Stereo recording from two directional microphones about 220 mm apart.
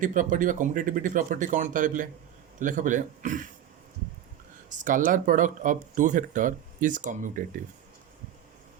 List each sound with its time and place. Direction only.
0.0 s speech: 35° right (ahead or behind)
4.7 s speech: 35° right (ahead or behind)